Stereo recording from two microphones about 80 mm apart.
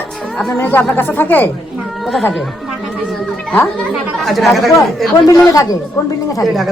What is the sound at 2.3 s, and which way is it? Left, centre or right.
Chatter, centre.